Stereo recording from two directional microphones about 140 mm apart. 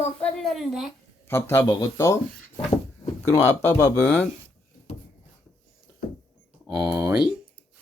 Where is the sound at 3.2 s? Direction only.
15° left (ahead or behind).